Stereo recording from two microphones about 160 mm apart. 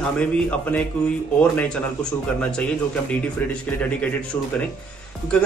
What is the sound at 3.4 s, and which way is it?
Speech, 10° left (ahead or behind).